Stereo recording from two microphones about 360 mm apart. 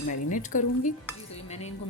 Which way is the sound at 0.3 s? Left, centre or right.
Left.